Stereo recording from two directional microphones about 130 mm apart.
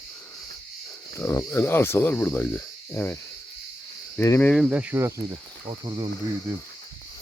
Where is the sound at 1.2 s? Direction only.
15° left (ahead or behind).